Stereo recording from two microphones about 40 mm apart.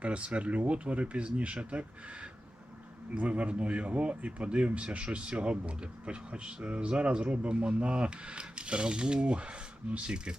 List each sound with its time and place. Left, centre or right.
0.0 s a man's voice: right
3.2 s a man's voice: right